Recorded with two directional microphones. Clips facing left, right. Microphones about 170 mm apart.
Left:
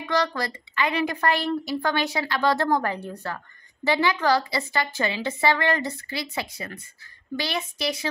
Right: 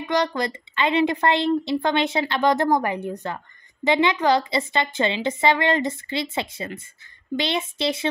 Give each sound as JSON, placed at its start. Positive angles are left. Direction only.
{"t": 0.0, "sound": "a woman's voice", "side_deg": -20}